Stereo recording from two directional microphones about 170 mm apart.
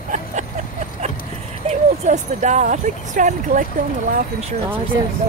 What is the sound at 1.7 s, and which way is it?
Speech, 45° right (ahead or behind).